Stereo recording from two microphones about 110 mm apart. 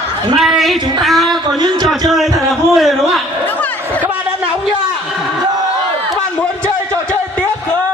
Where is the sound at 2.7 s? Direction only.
Centre (ahead or behind).